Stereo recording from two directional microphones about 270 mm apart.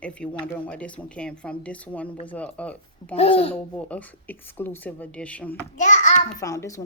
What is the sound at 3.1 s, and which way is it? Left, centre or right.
Speech, left.